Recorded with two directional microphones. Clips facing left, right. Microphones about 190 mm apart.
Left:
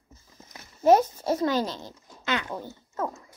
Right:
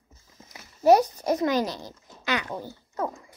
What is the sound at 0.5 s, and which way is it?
A child's voice, 15° right (ahead or behind).